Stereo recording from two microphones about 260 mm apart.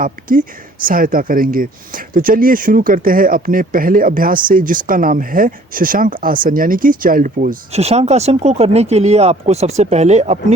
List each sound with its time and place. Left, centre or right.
0.0 s speech: right